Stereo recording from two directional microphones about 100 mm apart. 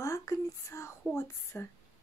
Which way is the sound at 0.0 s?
30° left (ahead or behind).